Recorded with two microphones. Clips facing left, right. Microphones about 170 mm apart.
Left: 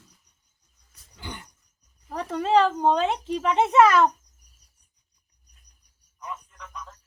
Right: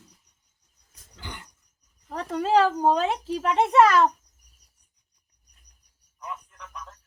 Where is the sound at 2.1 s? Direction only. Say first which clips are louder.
Left 1 dB; centre (ahead or behind).